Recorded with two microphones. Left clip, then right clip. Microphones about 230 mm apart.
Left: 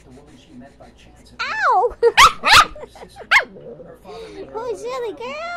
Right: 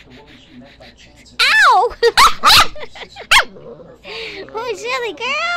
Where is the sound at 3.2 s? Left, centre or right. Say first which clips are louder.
Right 3 dB; centre.